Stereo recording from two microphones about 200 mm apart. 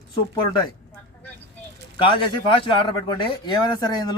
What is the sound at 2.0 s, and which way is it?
Speech, 25° left (ahead or behind).